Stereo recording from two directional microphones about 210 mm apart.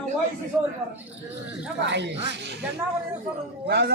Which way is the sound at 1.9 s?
55° right (ahead or behind).